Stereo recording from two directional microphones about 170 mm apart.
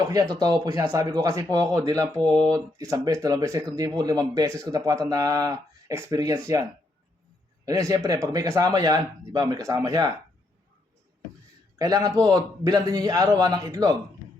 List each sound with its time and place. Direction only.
0.0 s speech: 20° right (ahead or behind)
11.8 s speech: 20° right (ahead or behind)